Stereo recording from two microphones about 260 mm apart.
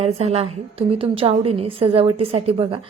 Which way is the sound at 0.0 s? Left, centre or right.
Right.